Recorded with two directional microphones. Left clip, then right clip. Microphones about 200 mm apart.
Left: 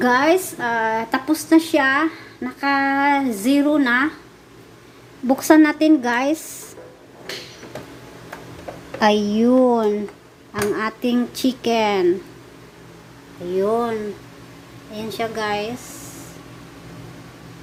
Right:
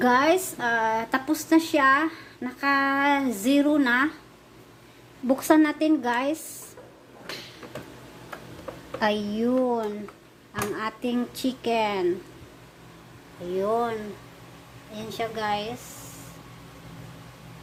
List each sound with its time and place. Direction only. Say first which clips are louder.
0.0 s a woman's voice: left 4 dB; centre (ahead or behind)
5.3 s a woman's voice: left 6 dB; centre (ahead or behind)
9.0 s speech: left 8 dB; 10° left (ahead or behind)
13.6 s a woman's voice: left 5 dB; centre (ahead or behind)